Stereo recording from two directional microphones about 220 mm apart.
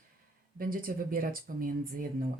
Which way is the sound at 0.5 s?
40° right (ahead or behind).